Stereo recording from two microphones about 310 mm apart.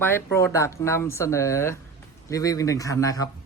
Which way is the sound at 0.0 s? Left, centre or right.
Centre.